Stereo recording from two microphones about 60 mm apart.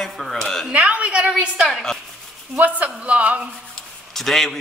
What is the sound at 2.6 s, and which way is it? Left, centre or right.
Speech, right.